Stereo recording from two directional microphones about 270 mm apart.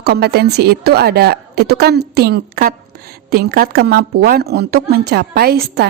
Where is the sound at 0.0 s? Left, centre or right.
Right.